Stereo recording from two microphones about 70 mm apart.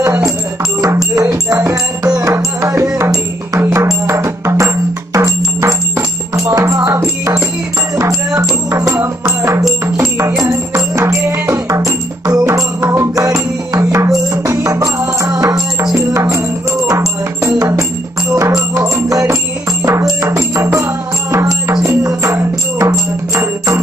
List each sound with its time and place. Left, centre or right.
0.7 s music: right
19.0 s music: right